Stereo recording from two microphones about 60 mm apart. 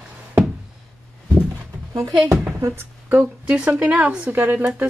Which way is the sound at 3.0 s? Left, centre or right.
Right.